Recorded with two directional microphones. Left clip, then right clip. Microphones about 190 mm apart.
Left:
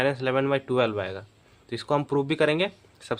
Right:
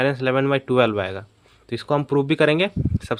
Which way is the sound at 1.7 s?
35° right (ahead or behind).